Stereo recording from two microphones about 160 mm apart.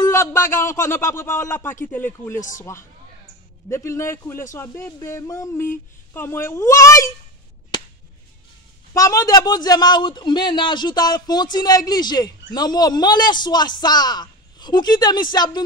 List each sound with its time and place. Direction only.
0.0 s a man's voice: 20° left (ahead or behind)
3.7 s a man's voice: 15° left (ahead or behind)
8.9 s a man's voice: 20° left (ahead or behind)